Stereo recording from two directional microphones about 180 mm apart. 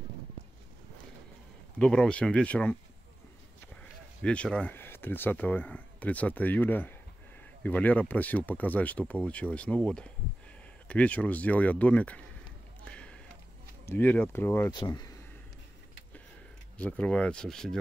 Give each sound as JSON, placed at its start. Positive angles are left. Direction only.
{"t": 1.8, "sound": "speech", "side_deg": 5}
{"t": 4.2, "sound": "speech", "side_deg": 5}
{"t": 12.8, "sound": "basketball bounce", "side_deg": 5}
{"t": 13.8, "sound": "speech", "side_deg": 10}
{"t": 16.7, "sound": "speech", "side_deg": 5}